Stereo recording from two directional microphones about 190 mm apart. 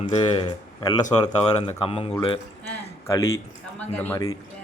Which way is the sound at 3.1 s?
15° left (ahead or behind).